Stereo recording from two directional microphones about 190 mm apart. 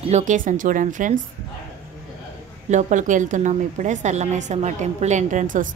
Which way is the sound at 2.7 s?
40° right (ahead or behind).